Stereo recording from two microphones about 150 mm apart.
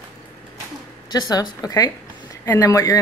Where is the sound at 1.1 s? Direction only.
25° left (ahead or behind).